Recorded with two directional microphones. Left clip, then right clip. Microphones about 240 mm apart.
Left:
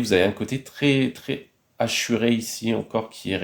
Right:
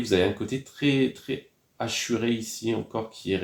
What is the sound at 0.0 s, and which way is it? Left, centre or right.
Speech, left.